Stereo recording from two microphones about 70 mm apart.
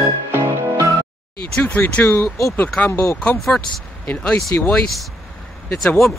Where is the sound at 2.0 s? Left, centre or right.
Left.